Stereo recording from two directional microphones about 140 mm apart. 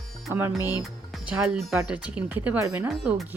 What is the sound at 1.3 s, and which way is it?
Speech, 5° right (ahead or behind).